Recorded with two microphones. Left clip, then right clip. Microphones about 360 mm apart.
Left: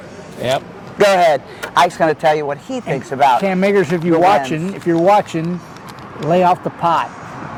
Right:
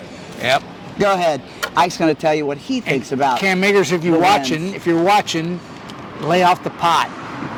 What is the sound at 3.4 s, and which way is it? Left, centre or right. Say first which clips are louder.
Speech: even; centre.